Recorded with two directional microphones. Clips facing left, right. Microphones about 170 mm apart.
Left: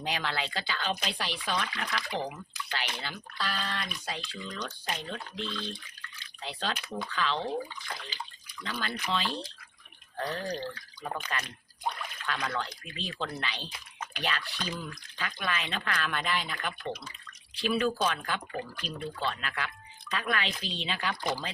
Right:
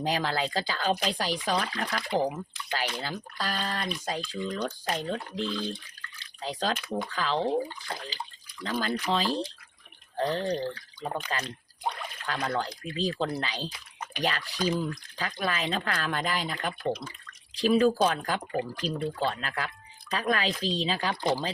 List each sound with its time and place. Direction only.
0.0 s speech: 35° right (ahead or behind)